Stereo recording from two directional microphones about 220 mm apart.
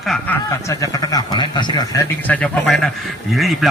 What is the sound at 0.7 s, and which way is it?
Speech, 15° left (ahead or behind).